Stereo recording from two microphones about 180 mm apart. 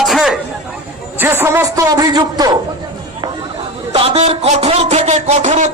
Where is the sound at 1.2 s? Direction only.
15° right (ahead or behind).